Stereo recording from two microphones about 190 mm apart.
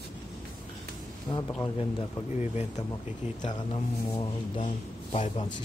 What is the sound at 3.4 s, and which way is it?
Speech, 25° left (ahead or behind).